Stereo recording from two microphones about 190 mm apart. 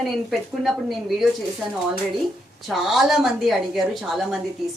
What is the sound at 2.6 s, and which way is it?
A woman's voice, centre (ahead or behind).